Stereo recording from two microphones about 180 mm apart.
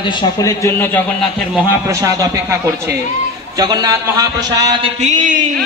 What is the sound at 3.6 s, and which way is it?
A man's voice, 20° right (ahead or behind).